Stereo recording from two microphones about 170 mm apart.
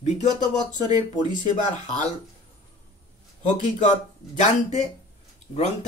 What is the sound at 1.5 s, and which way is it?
Speech, 45° left (ahead or behind).